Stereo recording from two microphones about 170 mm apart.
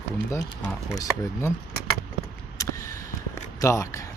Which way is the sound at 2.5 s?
20° left (ahead or behind).